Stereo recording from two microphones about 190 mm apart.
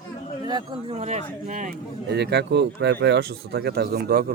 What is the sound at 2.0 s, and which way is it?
Speech, 60° right (ahead or behind).